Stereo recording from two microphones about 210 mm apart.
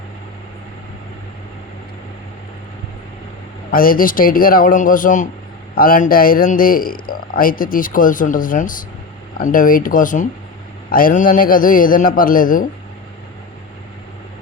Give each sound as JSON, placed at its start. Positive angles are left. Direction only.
{"t": 3.7, "sound": "a man's voice", "side_deg": 45}